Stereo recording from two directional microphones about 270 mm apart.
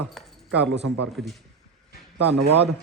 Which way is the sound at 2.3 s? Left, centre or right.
Right.